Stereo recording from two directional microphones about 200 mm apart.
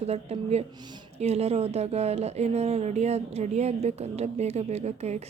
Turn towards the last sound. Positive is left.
turn(degrees=-35)  # may be behind; listen again after turning